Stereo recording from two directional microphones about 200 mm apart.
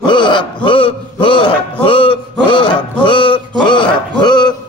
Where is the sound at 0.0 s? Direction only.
25° left (ahead or behind).